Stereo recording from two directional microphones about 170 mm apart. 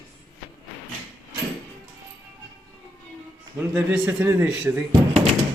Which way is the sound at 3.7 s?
5° right (ahead or behind).